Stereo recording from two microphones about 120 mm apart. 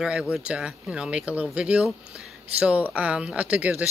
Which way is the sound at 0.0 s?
5° right (ahead or behind).